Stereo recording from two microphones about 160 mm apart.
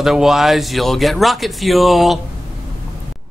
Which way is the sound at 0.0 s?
Centre (ahead or behind).